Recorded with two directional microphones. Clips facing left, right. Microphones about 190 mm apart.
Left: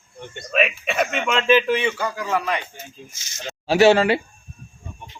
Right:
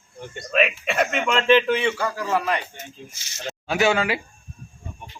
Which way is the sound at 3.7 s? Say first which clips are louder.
Left 6 dB; 30° left (ahead or behind).